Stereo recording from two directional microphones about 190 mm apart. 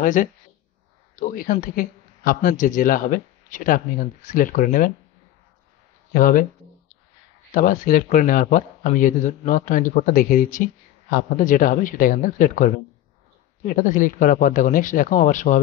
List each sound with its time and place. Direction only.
0.0 s a man's voice: 45° left (ahead or behind)
6.1 s speech: 45° left (ahead or behind)
7.5 s speech: 45° left (ahead or behind)